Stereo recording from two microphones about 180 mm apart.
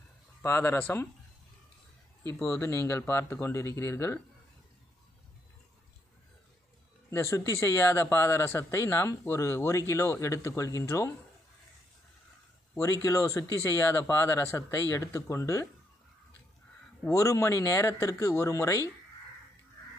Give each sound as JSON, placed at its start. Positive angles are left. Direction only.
{"t": 0.4, "sound": "a man's voice", "side_deg": 15}
{"t": 2.4, "sound": "a man's voice", "side_deg": 15}
{"t": 7.1, "sound": "a man's voice", "side_deg": 15}
{"t": 12.7, "sound": "a man's voice", "side_deg": 15}
{"t": 17.0, "sound": "a man's voice", "side_deg": 15}